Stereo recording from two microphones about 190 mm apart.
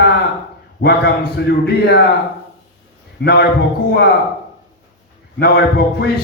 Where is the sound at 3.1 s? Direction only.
60° left (ahead or behind).